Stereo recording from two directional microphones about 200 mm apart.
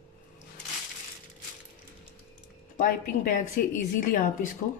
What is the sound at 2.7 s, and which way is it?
A woman's voice, 40° left (ahead or behind).